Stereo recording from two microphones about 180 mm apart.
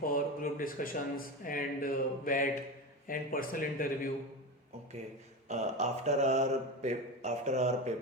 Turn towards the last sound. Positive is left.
turn(degrees=-40)  # may be behind; listen again after turning